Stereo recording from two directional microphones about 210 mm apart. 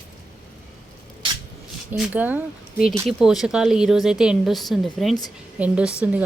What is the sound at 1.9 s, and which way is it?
Speech, 5° right (ahead or behind).